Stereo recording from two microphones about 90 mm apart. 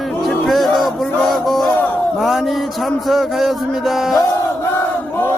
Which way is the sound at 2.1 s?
Centre (ahead or behind).